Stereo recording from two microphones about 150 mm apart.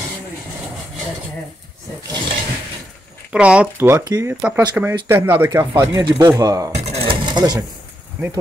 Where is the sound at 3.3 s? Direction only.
10° right (ahead or behind).